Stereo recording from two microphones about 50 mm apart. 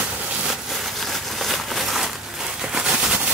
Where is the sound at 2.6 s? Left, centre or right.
Centre.